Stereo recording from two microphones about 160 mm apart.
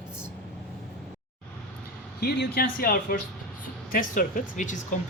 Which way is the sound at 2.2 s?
80° left.